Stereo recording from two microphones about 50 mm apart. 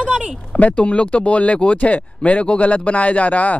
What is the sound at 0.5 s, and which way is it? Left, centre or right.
Speech, left.